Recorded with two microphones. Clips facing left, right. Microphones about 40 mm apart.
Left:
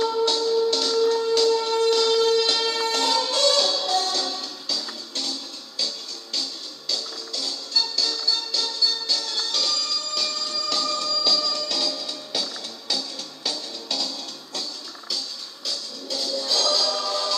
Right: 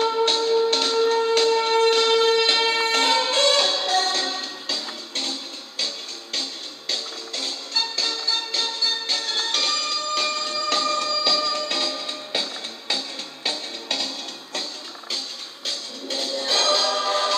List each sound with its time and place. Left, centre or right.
0.0 s music: right
6.9 s music: right